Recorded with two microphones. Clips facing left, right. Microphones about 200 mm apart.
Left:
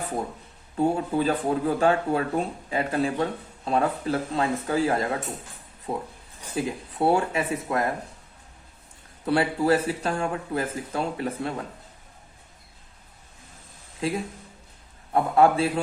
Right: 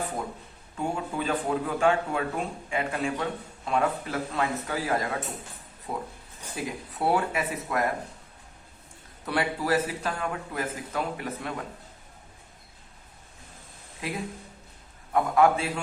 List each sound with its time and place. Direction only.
0.8 s speech: 35° left (ahead or behind)
9.2 s speech: 30° left (ahead or behind)
14.0 s speech: 30° left (ahead or behind)